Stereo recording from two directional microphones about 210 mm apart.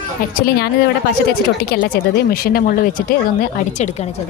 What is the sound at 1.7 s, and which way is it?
Speech, 45° left (ahead or behind).